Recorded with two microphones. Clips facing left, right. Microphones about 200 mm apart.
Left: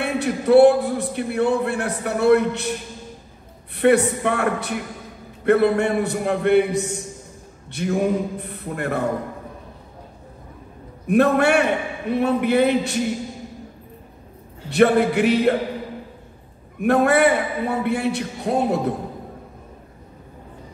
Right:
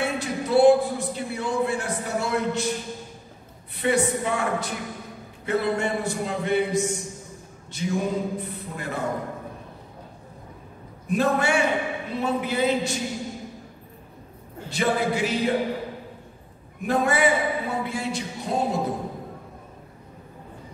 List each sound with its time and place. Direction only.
0.0 s a man's voice: 60° left (ahead or behind)
3.7 s a man's voice: 60° left (ahead or behind)
11.1 s a man's voice: 60° left (ahead or behind)
14.7 s a man's voice: 65° left (ahead or behind)
16.8 s a man's voice: 60° left (ahead or behind)